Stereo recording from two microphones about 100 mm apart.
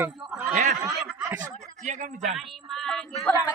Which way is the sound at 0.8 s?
25° right (ahead or behind).